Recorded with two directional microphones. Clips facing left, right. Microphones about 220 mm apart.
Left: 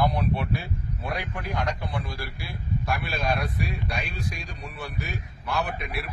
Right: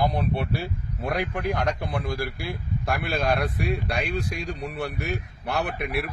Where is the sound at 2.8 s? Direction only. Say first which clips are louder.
Right 4 dB; 55° right (ahead or behind).